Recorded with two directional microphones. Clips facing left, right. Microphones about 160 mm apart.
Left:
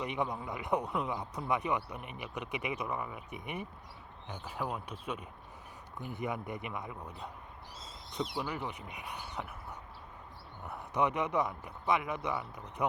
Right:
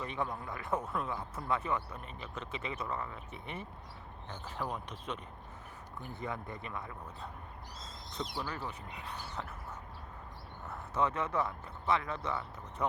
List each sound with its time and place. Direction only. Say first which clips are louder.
0.0 s speech: left 2 dB; 15° left (ahead or behind)
10.7 s speech: left 2 dB; 15° left (ahead or behind)